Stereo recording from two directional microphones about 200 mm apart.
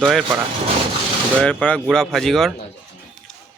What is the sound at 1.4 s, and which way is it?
Speech, 5° left (ahead or behind).